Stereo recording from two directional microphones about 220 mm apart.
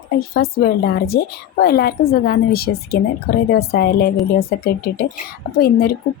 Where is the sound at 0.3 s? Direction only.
45° left (ahead or behind).